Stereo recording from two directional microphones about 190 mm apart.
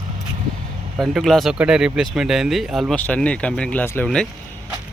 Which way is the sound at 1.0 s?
Centre (ahead or behind).